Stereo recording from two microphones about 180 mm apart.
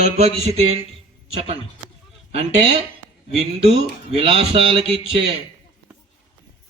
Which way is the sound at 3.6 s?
35° right (ahead or behind).